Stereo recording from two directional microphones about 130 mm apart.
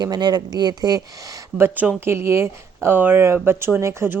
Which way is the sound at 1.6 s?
15° right (ahead or behind).